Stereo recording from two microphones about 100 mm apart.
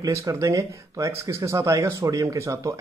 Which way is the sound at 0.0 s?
30° right (ahead or behind).